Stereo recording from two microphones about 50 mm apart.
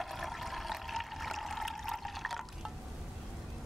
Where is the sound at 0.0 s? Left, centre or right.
Centre.